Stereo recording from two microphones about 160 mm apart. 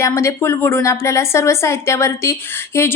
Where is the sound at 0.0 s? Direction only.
20° left (ahead or behind).